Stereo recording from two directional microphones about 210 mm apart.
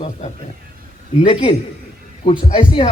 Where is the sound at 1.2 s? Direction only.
25° left (ahead or behind).